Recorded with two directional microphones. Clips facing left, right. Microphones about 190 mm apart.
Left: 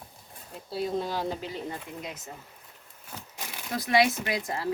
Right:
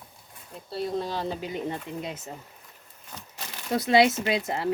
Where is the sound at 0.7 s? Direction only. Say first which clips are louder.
Even; 5° left (ahead or behind).